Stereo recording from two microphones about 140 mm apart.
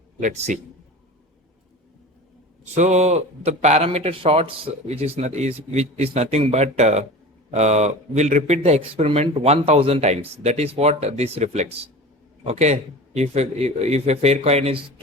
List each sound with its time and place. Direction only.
0.2 s a man's voice: 65° right (ahead or behind)
2.7 s speech: 55° right (ahead or behind)